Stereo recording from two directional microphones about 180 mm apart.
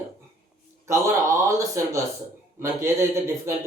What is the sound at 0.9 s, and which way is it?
Speech, 15° right (ahead or behind).